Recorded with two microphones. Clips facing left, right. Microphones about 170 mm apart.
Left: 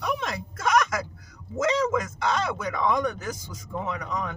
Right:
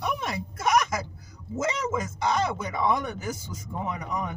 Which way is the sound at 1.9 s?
10° right (ahead or behind).